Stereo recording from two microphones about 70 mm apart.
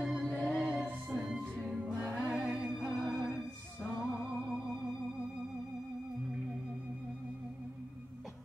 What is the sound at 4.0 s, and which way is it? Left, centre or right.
Music, centre.